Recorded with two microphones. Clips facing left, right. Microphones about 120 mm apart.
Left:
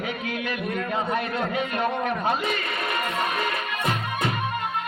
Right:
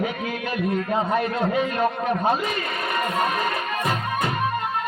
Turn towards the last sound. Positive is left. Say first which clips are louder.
# right 2 dB
turn(degrees=-40)  # may be behind; listen again after turning